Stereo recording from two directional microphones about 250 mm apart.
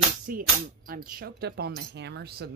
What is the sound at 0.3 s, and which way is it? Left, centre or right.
Speech, right.